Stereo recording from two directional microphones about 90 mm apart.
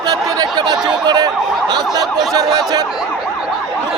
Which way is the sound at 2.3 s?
45° right (ahead or behind).